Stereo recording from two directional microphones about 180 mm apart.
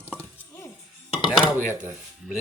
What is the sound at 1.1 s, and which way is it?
Dishes, centre (ahead or behind).